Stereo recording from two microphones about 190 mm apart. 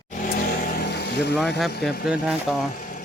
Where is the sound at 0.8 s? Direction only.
60° left (ahead or behind).